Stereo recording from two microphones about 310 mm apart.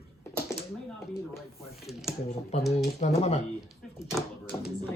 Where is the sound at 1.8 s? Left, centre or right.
Centre.